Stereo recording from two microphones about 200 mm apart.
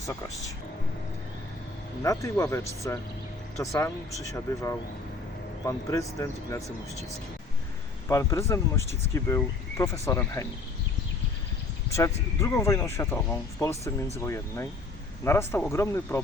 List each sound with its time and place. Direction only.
2.0 s speech: 15° left (ahead or behind)
5.6 s speech: 15° left (ahead or behind)
8.0 s speech: 15° left (ahead or behind)
11.9 s speech: 15° left (ahead or behind)